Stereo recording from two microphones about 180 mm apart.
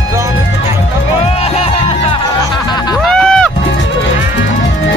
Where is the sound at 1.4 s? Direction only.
35° left (ahead or behind).